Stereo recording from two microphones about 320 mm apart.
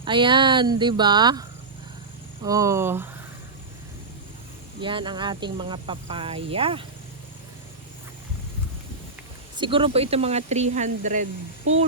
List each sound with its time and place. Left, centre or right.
0.0 s speech: centre
4.8 s speech: centre
9.6 s speech: centre